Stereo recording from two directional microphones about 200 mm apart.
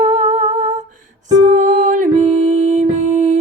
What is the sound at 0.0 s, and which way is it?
Humming, 35° right (ahead or behind).